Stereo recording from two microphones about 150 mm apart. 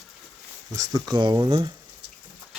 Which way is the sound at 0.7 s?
25° right (ahead or behind).